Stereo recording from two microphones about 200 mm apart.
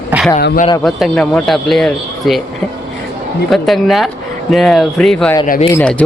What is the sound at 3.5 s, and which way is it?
Speech, centre (ahead or behind).